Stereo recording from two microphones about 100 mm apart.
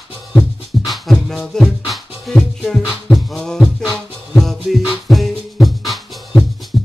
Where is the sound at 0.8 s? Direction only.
Centre (ahead or behind).